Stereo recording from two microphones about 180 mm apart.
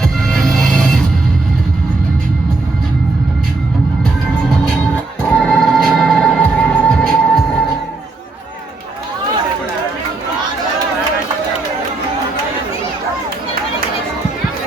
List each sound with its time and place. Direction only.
0.0 s music: 5° left (ahead or behind)
5.3 s music: 5° left (ahead or behind)